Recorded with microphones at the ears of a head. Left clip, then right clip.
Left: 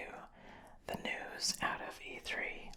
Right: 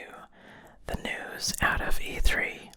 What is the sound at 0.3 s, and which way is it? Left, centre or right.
Whispering, right.